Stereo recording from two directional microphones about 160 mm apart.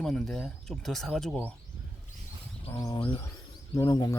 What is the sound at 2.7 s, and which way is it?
Speech, 20° left (ahead or behind).